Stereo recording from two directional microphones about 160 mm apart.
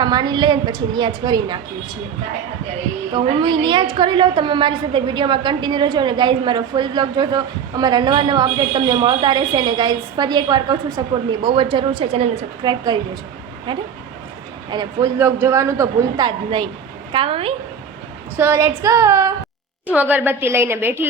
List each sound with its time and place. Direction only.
0.0 s a woman's voice: 25° right (ahead or behind)
3.1 s a woman's voice: 30° right (ahead or behind)
15.2 s a woman's voice: 15° right (ahead or behind); by 17.5 s 35° right (ahead or behind)
18.3 s a woman's voice: 15° right (ahead or behind)